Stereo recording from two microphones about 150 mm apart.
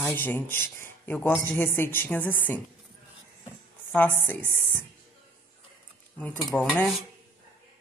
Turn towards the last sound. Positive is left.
turn(degrees=10)  # may be behind; listen again after turning